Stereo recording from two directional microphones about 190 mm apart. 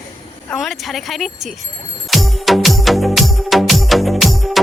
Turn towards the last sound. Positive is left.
turn(degrees=0)  # may be behind; listen again after turning